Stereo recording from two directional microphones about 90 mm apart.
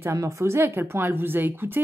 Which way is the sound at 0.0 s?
35° right (ahead or behind).